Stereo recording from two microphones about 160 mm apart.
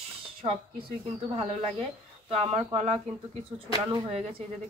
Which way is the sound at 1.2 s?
35° right (ahead or behind).